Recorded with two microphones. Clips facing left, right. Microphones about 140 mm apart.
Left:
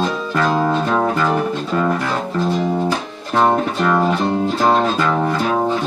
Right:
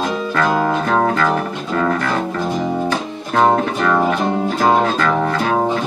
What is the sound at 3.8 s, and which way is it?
Music, 15° left (ahead or behind).